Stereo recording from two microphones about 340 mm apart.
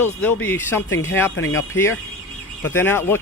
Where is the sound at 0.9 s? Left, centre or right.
Left.